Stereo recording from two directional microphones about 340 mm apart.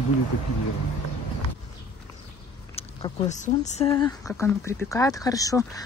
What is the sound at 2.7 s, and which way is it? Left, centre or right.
Speech, centre.